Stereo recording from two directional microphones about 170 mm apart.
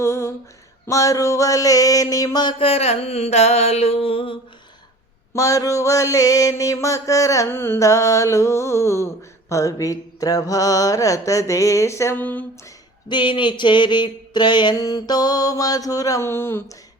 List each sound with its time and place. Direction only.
0.0 s a sound: 15° left (ahead or behind); by 4.4 s 30° left (ahead or behind)
5.3 s mantra: 20° left (ahead or behind)
13.1 s mantra: 30° left (ahead or behind)